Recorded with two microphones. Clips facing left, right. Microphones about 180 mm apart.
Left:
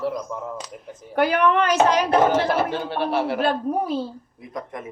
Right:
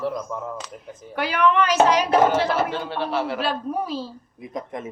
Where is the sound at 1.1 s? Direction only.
50° left (ahead or behind).